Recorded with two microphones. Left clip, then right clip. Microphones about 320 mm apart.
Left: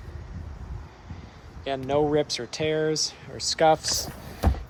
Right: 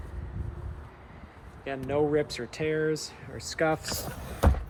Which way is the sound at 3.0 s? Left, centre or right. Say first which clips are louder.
Left 10 dB; centre.